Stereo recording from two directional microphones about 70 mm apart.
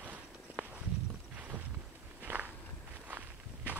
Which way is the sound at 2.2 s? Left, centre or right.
Right.